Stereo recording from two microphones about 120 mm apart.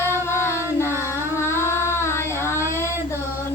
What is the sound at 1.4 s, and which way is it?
Child singing, 20° left (ahead or behind).